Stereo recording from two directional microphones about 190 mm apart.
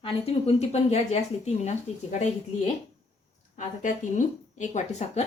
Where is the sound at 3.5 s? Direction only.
40° left (ahead or behind).